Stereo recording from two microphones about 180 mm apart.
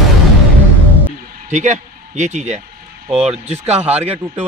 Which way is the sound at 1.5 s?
40° right (ahead or behind).